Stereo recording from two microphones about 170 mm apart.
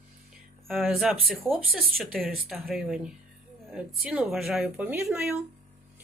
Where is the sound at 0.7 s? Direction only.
Centre (ahead or behind).